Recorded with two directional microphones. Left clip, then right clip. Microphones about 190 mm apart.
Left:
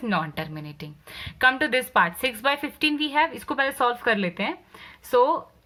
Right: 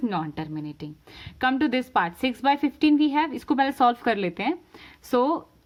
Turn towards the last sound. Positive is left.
turn(degrees=-50)  # may be behind; listen again after turning